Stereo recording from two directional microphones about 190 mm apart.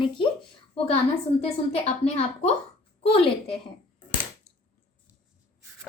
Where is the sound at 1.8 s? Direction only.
35° left (ahead or behind).